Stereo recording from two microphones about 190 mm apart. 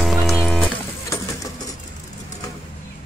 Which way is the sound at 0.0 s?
Centre (ahead or behind).